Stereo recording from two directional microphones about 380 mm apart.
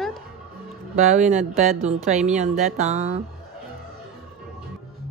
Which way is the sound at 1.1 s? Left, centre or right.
Centre.